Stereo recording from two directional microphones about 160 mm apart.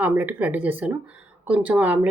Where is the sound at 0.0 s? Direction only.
10° right (ahead or behind).